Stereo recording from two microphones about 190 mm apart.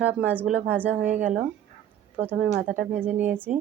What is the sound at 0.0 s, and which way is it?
A woman's voice, 10° right (ahead or behind).